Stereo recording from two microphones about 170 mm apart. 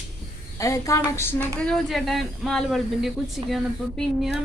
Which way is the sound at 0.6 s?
20° left (ahead or behind).